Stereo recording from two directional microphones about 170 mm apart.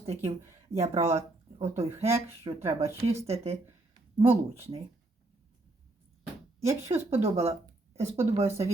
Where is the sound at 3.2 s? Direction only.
35° right (ahead or behind).